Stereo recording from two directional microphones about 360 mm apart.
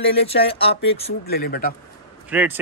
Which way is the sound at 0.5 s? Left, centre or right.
Centre.